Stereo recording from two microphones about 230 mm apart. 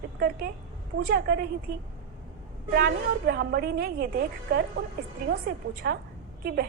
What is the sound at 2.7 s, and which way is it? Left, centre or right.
A woman's voice, right.